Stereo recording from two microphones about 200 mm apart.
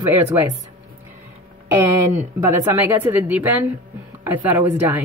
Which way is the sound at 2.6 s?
10° right (ahead or behind).